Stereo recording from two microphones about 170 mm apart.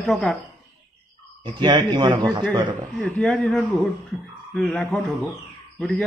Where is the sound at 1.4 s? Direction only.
25° right (ahead or behind).